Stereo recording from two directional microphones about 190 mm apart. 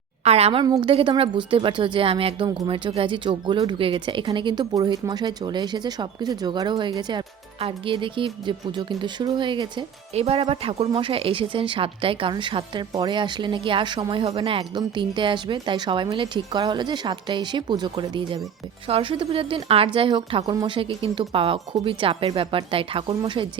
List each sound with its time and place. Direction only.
0.3 s a woman's voice: 35° right (ahead or behind)